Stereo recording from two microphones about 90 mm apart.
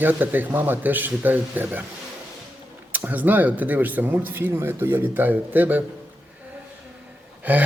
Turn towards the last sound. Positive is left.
turn(degrees=-20)  # may be behind; listen again after turning